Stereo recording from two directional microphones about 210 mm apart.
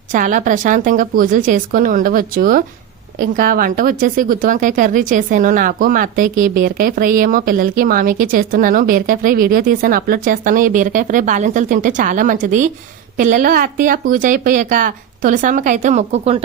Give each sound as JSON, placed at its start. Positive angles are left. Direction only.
{"t": 0.1, "sound": "a woman's voice", "side_deg": -40}